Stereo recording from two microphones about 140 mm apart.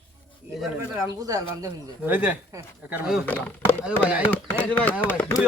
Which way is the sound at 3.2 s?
15° left (ahead or behind).